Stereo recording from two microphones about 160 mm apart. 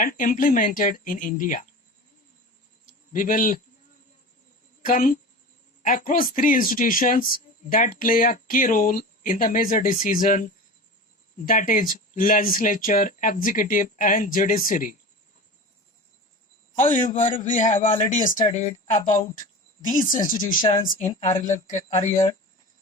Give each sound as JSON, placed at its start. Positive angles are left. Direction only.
{"t": 0.0, "sound": "speech", "side_deg": 60}
{"t": 2.8, "sound": "a sound", "side_deg": 55}
{"t": 4.8, "sound": "a woman's voice", "side_deg": 60}
{"t": 16.7, "sound": "speech", "side_deg": 50}
{"t": 17.2, "sound": "speech", "side_deg": 35}
{"t": 18.1, "sound": "speech", "side_deg": 55}
{"t": 21.2, "sound": "speech", "side_deg": 35}
{"t": 21.4, "sound": "speech", "side_deg": 50}